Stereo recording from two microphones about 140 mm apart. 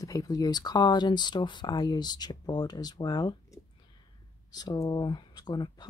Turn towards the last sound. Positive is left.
turn(degrees=30)  # may be behind; listen again after turning